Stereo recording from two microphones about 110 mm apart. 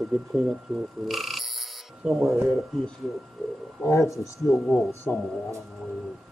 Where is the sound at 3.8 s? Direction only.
25° left (ahead or behind).